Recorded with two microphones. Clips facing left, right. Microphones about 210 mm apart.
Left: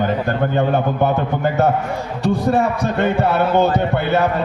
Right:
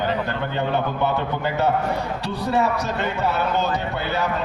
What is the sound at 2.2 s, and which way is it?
A man's voice, 50° left (ahead or behind).